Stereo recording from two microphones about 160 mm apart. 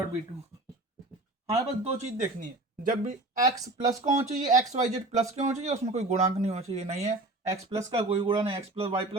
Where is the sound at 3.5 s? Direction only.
20° right (ahead or behind).